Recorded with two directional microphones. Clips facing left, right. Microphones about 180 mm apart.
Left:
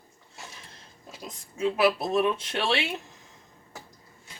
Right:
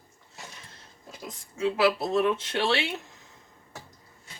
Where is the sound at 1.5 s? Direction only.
20° left (ahead or behind).